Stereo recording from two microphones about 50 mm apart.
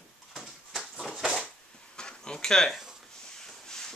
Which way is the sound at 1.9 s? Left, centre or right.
Centre.